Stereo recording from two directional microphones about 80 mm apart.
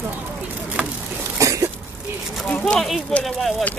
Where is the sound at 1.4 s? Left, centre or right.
Right.